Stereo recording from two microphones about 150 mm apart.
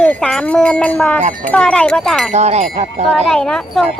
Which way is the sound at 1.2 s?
65° right (ahead or behind).